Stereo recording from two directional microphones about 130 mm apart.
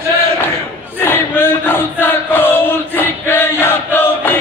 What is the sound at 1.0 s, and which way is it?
Chant, 15° left (ahead or behind).